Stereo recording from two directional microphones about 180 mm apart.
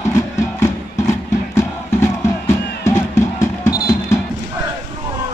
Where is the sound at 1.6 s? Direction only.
15° left (ahead or behind).